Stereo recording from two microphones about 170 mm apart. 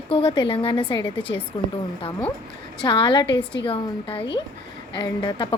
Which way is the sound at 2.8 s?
30° left (ahead or behind).